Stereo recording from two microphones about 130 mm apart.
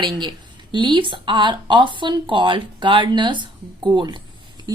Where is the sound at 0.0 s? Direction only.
35° right (ahead or behind).